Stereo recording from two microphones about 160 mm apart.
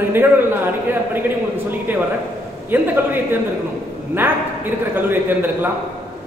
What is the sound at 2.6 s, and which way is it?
A man's voice, 15° right (ahead or behind).